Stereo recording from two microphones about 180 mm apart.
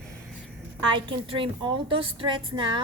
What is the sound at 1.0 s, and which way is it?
A woman's voice, 30° right (ahead or behind).